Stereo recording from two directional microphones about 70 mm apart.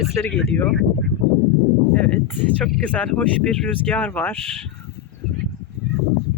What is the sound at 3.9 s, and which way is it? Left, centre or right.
Speech, left.